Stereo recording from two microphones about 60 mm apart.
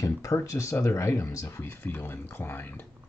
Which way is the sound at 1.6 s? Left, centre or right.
Left.